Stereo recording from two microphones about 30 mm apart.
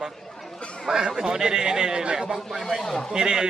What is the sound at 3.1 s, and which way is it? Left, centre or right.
Speech, right.